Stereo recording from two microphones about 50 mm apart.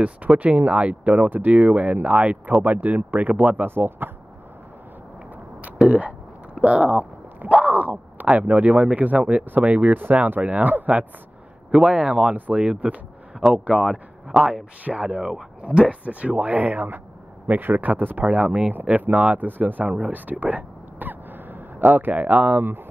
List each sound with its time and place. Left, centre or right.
0.0 s speech: right
3.6 s speech: right
5.6 s a sound: right
6.6 s speech: right
7.4 s a sound: right
8.4 s speech: right
11.7 s speech: centre
14.4 s speech: right
20.1 s a sound: right